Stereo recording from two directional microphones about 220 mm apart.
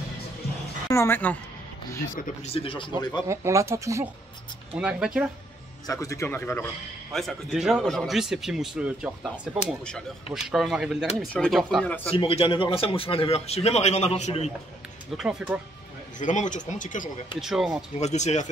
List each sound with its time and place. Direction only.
0.8 s a man's voice: 10° left (ahead or behind)
2.1 s speech: 30° left (ahead or behind)
3.3 s a man's voice: 15° right (ahead or behind)
5.9 s a man's voice: 15° left (ahead or behind)
12.1 s speech: 25° left (ahead or behind)
15.1 s a man's voice: centre (ahead or behind)
16.2 s speech: 35° left (ahead or behind)
17.4 s a man's voice: centre (ahead or behind)
17.9 s speech: 30° left (ahead or behind)